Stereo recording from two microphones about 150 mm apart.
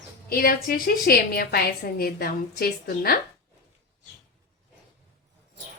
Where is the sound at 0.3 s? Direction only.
75° left (ahead or behind).